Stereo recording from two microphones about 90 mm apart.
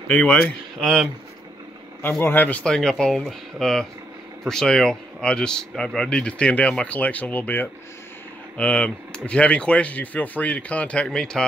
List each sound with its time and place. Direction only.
0.1 s speech: 15° left (ahead or behind)
0.7 s speech: 5° left (ahead or behind)
2.0 s a man's voice: 25° left (ahead or behind)
2.6 s speech: 5° left (ahead or behind)